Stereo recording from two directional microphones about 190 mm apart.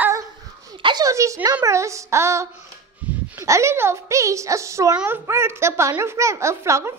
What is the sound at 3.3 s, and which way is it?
A child's voice, 15° right (ahead or behind).